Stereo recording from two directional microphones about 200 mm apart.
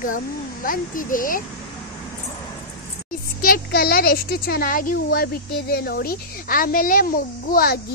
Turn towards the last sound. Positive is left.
turn(degrees=45)  # may be behind; listen again after turning